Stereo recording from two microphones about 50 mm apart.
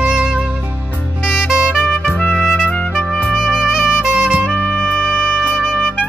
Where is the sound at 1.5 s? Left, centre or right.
Centre.